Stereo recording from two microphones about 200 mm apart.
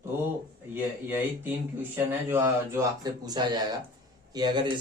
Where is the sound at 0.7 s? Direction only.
10° right (ahead or behind).